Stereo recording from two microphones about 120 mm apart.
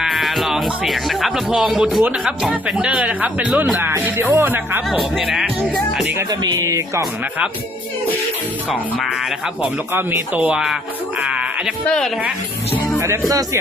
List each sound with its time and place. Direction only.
0.0 s speech: centre (ahead or behind); by 4.8 s 20° right (ahead or behind)
4.9 s speech: centre (ahead or behind)
6.4 s speech: 25° right (ahead or behind)
9.6 s speech: 15° right (ahead or behind)
11.2 s a sound: 10° right (ahead or behind)
11.9 s speech: 5° left (ahead or behind)
13.0 s speech: 25° right (ahead or behind)